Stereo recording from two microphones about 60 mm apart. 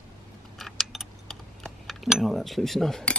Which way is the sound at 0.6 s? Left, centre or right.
Centre.